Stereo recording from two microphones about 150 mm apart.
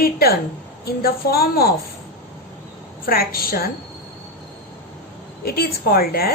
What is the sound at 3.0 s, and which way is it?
Speech, 80° left.